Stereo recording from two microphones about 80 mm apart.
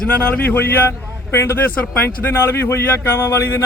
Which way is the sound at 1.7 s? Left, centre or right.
Left.